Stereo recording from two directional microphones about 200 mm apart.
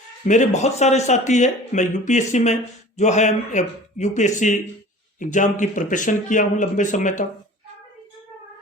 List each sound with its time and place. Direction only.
0.3 s speech: 35° left (ahead or behind)